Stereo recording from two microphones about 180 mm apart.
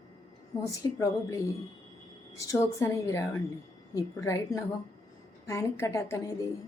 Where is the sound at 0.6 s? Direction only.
15° left (ahead or behind).